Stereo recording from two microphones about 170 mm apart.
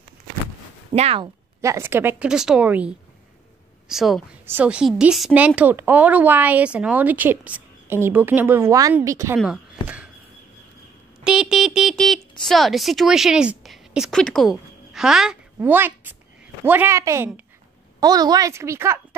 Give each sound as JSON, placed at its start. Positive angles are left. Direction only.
{"t": 0.9, "sound": "speech", "side_deg": -35}
{"t": 1.2, "sound": "speech", "side_deg": -20}
{"t": 3.9, "sound": "music", "side_deg": 0}
{"t": 4.5, "sound": "speech", "side_deg": -10}
{"t": 11.2, "sound": "music", "side_deg": -5}
{"t": 12.4, "sound": "a woman's voice", "side_deg": 0}